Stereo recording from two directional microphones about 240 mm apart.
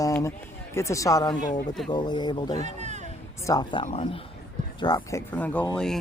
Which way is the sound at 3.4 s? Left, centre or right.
Centre.